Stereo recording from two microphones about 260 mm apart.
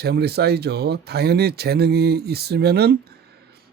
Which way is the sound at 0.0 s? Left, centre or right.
Right.